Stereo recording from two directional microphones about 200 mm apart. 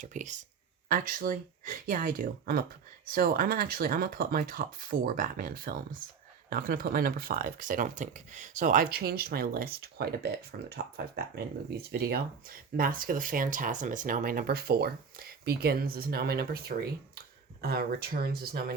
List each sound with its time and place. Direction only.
0.0 s speech: 40° right (ahead or behind)